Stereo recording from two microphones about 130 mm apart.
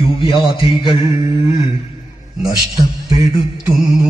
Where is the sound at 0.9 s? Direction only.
25° right (ahead or behind).